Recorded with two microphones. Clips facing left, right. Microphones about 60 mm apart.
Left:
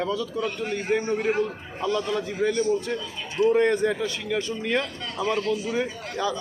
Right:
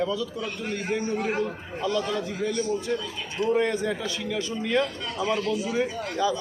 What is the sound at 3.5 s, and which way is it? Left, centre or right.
A man's voice, left.